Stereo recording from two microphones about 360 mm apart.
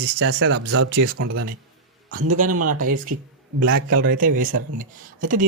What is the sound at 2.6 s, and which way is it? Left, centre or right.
Speech, right.